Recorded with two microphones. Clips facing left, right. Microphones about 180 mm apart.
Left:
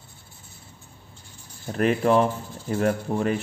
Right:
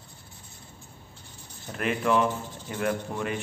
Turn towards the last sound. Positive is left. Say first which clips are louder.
# left 6 dB
turn(degrees=35)  # may be behind; listen again after turning